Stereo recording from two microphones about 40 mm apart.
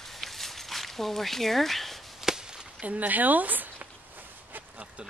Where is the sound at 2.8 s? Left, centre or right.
Right.